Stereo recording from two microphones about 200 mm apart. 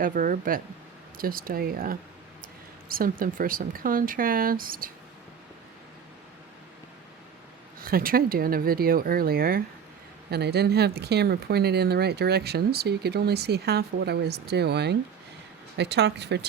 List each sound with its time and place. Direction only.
0.0 s speech: 40° right (ahead or behind)
7.8 s speech: 45° right (ahead or behind)